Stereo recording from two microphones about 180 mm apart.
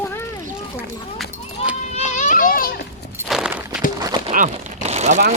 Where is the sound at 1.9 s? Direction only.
40° left (ahead or behind).